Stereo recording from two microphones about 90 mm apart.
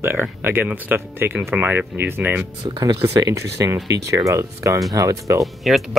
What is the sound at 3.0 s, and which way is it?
Speech, 35° right (ahead or behind).